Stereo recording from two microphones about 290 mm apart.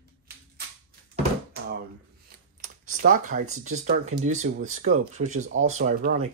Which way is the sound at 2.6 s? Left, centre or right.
Right.